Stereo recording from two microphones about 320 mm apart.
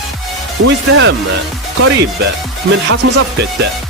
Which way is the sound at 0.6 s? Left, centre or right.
Right.